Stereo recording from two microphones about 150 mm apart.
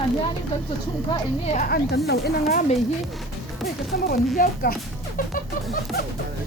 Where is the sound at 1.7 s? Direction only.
90° left.